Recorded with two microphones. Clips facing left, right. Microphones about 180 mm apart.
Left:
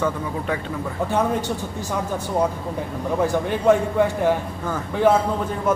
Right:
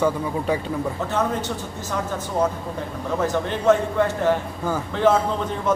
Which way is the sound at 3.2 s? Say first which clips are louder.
Left 2 dB; 10° left (ahead or behind).